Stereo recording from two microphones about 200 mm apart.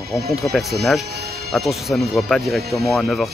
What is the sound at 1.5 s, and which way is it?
Speech, centre (ahead or behind).